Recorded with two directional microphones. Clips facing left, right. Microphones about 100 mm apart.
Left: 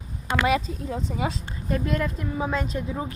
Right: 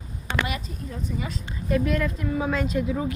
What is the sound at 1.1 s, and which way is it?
Speech, 90° left.